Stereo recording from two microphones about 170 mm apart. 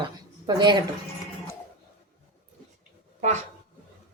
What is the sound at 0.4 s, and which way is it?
Speech, 25° right (ahead or behind).